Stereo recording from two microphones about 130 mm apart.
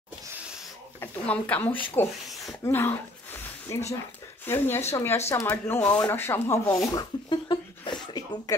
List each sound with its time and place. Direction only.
1.0 s speech: 10° left (ahead or behind)
2.2 s a sound: centre (ahead or behind)
2.6 s speech: 20° left (ahead or behind)
6.0 s speech: 15° left (ahead or behind)
6.9 s speech: 35° left (ahead or behind)